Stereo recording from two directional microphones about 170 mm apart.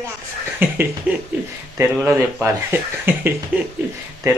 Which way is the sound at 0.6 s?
10° right (ahead or behind).